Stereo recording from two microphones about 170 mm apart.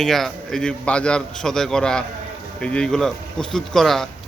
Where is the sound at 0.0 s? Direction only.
Centre (ahead or behind).